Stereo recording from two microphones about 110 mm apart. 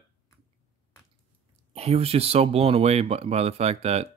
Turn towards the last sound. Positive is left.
turn(degrees=-70)  # may be behind; listen again after turning